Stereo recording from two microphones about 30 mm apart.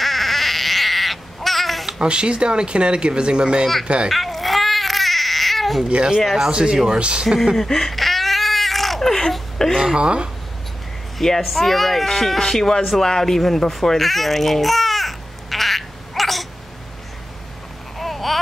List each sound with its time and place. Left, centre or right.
0.0 s baby cry: centre
2.0 s speech: right
4.1 s baby cry: centre
5.9 s speech: right
7.5 s speech: centre
7.9 s baby cry: centre
9.6 s speech: centre
9.9 s speech: right
11.1 s a woman's voice: centre
11.4 s speech: centre
12.8 s a sound: centre
17.9 s babbling: centre